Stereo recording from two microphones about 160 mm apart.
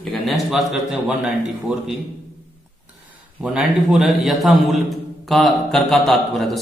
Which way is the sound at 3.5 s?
5° right (ahead or behind).